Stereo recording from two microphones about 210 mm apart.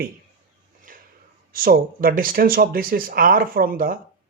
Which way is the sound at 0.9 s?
40° right (ahead or behind).